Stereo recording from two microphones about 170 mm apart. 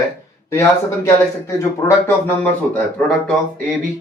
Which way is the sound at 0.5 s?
15° left (ahead or behind).